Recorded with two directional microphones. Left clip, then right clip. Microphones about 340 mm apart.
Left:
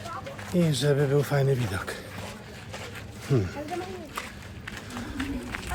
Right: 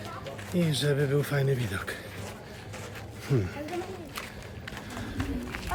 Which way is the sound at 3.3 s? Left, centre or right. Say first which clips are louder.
Left 3 dB; centre.